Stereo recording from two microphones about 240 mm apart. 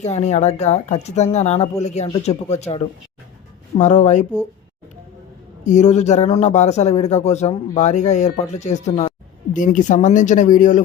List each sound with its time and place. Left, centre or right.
0.0 s speech: left
5.6 s speech: left